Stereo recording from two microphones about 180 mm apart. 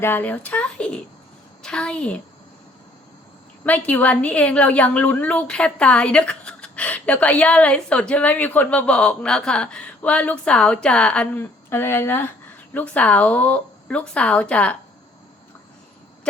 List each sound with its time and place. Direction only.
0.0 s a woman's voice: 10° left (ahead or behind)
3.6 s a woman's voice: 10° left (ahead or behind)